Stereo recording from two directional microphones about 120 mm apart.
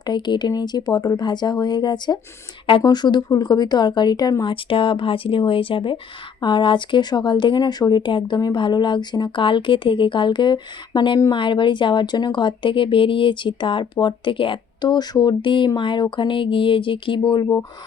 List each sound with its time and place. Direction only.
0.0 s speech: 40° left (ahead or behind)
4.5 s speech: 45° left (ahead or behind)